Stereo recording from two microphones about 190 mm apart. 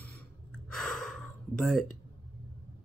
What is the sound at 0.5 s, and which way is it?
Gasp, 5° left (ahead or behind).